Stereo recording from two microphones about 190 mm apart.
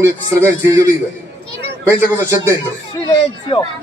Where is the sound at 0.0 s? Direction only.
15° right (ahead or behind).